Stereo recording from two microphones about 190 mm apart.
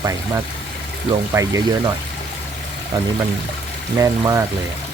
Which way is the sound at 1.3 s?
15° right (ahead or behind).